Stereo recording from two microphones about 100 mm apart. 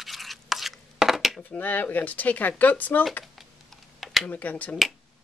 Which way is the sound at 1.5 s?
15° left (ahead or behind).